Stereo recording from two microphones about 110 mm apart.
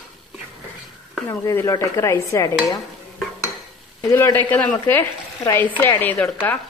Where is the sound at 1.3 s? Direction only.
25° left (ahead or behind).